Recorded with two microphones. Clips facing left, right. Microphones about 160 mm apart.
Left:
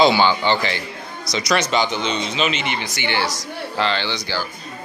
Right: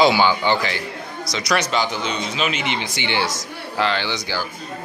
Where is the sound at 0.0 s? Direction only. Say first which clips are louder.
Left 1 dB; 10° right (ahead or behind).